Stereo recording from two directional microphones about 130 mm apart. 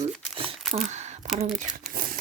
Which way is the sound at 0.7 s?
55° right (ahead or behind).